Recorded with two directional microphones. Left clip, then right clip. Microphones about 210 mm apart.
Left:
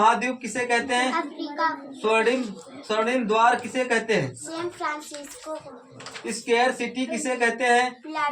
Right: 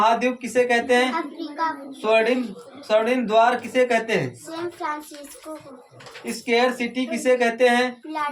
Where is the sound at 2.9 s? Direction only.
45° right (ahead or behind).